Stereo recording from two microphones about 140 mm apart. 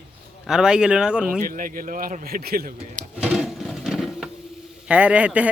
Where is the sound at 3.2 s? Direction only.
5° right (ahead or behind).